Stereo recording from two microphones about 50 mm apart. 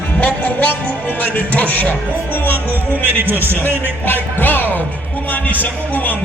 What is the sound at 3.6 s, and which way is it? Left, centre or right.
Music, left.